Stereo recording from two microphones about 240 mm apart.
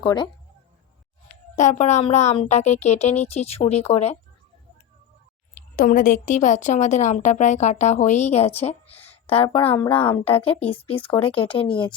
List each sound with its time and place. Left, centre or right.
0.0 s a woman's voice: centre
1.5 s a woman's voice: left
5.7 s a woman's voice: left; by 11.9 s centre